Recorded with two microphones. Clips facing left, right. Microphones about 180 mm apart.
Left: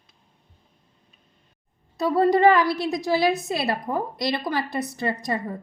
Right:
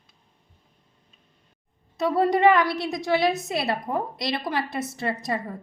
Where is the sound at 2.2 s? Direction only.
Centre (ahead or behind).